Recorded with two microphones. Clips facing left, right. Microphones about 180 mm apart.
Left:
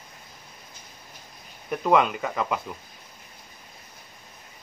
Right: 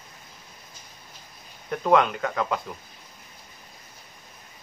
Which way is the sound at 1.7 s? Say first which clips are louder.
Right 1 dB; 5° left (ahead or behind).